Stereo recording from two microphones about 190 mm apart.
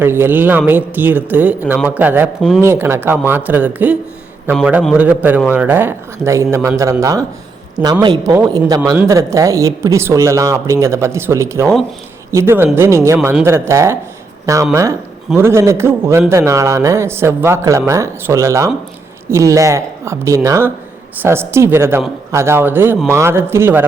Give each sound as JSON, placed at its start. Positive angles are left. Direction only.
{"t": 0.0, "sound": "speech", "side_deg": -10}